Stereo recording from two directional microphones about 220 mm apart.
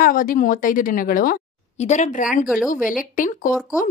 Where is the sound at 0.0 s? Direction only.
40° left (ahead or behind).